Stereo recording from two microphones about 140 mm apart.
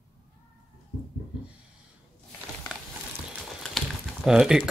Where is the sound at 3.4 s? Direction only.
Centre (ahead or behind).